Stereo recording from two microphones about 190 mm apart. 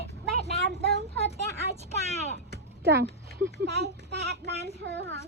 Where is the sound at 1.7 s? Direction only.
35° right (ahead or behind).